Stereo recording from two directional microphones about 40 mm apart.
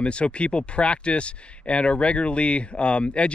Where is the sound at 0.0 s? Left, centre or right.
Left.